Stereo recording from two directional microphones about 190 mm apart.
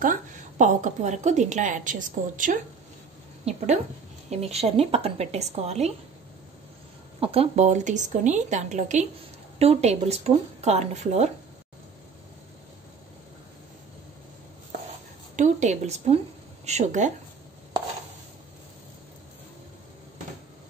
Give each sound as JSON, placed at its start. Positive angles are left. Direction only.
{"t": 0.0, "sound": "a woman's voice", "side_deg": -45}
{"t": 7.2, "sound": "a woman's voice", "side_deg": -30}
{"t": 14.9, "sound": "a sound", "side_deg": -40}
{"t": 16.6, "sound": "a woman's voice", "side_deg": -40}